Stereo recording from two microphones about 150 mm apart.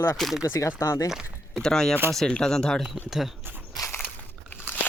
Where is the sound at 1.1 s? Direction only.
5° right (ahead or behind).